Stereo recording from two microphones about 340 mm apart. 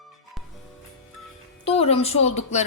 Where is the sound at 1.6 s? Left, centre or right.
Centre.